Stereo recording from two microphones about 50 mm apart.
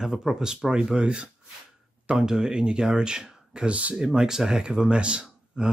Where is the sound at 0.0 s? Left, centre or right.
Centre.